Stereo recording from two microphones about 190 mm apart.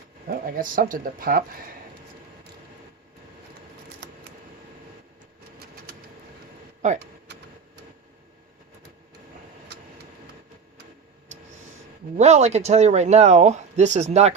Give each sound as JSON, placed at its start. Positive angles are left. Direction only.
{"t": 0.3, "sound": "speech", "side_deg": -50}
{"t": 6.8, "sound": "speech", "side_deg": -35}
{"t": 12.1, "sound": "speech", "side_deg": -35}